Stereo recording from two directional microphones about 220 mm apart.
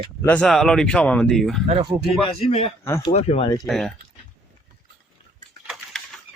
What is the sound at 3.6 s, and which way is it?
Speech, centre (ahead or behind).